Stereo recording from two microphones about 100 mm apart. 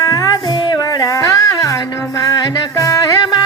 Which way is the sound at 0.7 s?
40° left (ahead or behind).